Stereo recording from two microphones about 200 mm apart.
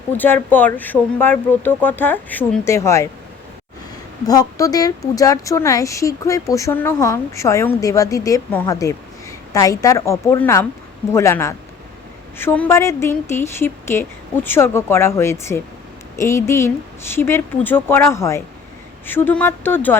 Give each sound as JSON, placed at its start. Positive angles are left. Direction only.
{"t": 0.2, "sound": "speech", "side_deg": 10}
{"t": 4.3, "sound": "speech", "side_deg": 15}